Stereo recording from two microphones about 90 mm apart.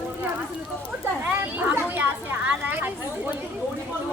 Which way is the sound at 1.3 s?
20° right (ahead or behind).